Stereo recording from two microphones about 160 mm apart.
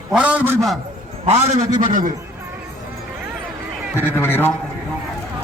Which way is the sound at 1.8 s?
55° right (ahead or behind).